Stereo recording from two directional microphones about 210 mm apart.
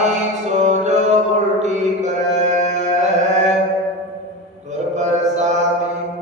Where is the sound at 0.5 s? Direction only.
35° right (ahead or behind).